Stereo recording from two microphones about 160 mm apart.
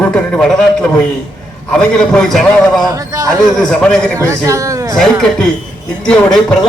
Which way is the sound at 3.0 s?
20° right (ahead or behind).